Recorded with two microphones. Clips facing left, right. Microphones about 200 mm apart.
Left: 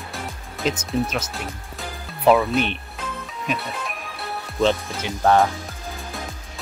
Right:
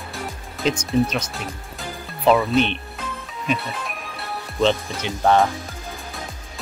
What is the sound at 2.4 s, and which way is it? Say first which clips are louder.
Speech: right 2 dB; 10° left (ahead or behind).